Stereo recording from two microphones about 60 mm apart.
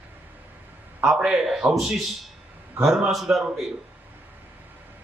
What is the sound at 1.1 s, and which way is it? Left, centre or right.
Speech, centre.